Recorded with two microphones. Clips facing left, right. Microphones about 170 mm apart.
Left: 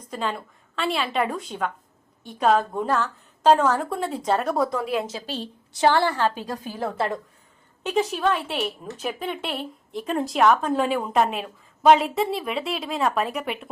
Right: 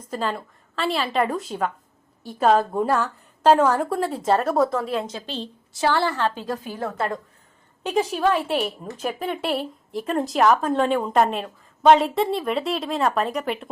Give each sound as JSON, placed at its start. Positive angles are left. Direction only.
{"t": 0.1, "sound": "a woman's voice", "side_deg": 0}
{"t": 6.7, "sound": "a woman's voice", "side_deg": 30}
{"t": 7.9, "sound": "a woman's voice", "side_deg": -5}